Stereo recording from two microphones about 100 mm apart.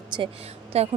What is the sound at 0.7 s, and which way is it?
Speech, 90° right.